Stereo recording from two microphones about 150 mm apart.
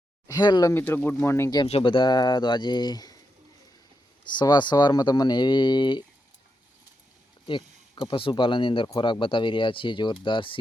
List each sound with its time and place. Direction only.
0.3 s speech: 25° left (ahead or behind)
0.7 s speech: 15° left (ahead or behind)
1.6 s speech: 40° left (ahead or behind)
4.3 s speech: 30° left (ahead or behind)
7.4 s speech: 35° left (ahead or behind)